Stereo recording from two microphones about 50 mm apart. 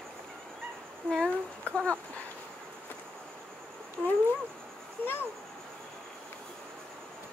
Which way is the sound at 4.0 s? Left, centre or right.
Left.